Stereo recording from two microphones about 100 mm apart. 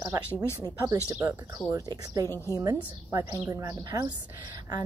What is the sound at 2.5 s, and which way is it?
A woman's voice, 35° right (ahead or behind).